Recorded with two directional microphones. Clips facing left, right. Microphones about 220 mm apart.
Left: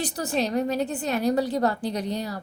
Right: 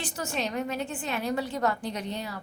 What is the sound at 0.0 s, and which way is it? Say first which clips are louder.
A woman's voice: left 6 dB; 35° left (ahead or behind).